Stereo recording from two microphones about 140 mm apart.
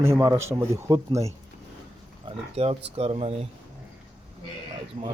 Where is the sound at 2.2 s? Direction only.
45° right (ahead or behind).